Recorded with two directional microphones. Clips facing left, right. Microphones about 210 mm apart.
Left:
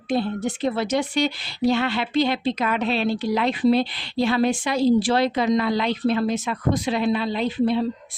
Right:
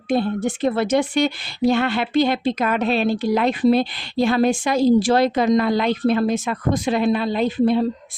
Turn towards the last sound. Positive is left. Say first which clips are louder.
# right 3 dB
turn(degrees=-45)  # may be behind; listen again after turning